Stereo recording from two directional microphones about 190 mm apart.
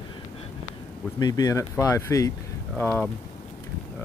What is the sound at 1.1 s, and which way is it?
Speech, 20° left (ahead or behind).